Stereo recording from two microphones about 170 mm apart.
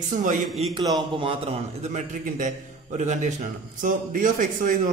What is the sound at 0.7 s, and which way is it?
A man's voice, 25° right (ahead or behind).